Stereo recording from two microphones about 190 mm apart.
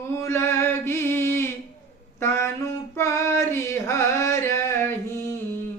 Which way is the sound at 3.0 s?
15° left (ahead or behind).